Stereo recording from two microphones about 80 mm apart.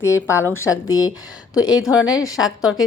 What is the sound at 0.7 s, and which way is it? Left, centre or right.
A woman's voice, left.